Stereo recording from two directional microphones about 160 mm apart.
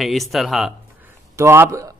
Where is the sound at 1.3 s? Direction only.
15° right (ahead or behind).